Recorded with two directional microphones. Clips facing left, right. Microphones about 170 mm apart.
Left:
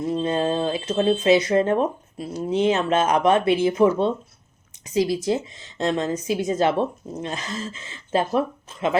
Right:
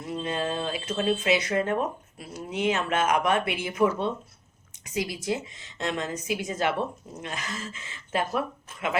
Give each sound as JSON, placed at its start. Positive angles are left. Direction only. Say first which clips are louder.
{"t": 0.0, "sound": "speech", "louder": "left 7 dB", "side_deg": 30}